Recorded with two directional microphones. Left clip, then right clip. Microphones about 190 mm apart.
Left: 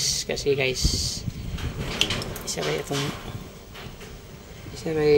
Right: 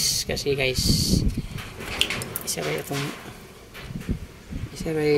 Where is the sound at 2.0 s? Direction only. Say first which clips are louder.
Even; 5° right (ahead or behind).